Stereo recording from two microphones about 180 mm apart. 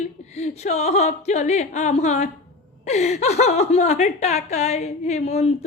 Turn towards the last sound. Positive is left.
turn(degrees=40)  # may be behind; listen again after turning